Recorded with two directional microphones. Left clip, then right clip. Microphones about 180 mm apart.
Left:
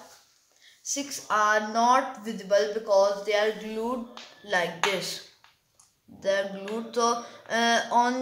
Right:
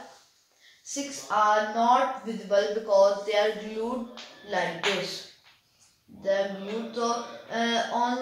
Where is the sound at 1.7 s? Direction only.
35° left (ahead or behind).